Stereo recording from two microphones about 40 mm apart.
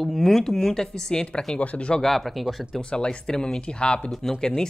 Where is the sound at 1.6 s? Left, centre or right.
Left.